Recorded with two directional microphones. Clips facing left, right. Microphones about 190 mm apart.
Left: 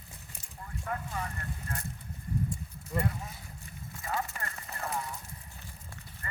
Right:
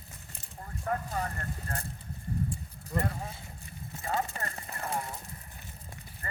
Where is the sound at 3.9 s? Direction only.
25° right (ahead or behind).